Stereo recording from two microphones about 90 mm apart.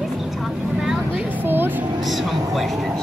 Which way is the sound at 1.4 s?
25° right (ahead or behind).